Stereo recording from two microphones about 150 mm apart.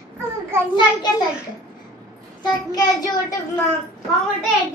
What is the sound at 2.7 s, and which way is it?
Child singing, 25° left (ahead or behind).